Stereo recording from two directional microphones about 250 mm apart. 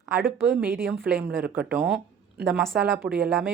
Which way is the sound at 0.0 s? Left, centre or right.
Centre.